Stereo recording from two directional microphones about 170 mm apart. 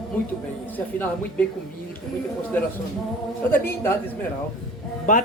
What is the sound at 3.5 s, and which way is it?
Speech, 15° left (ahead or behind).